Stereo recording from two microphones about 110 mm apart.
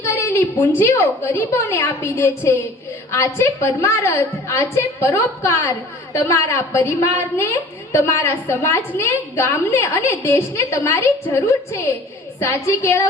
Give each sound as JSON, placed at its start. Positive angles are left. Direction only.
{"t": 0.0, "sound": "a woman's voice", "side_deg": 20}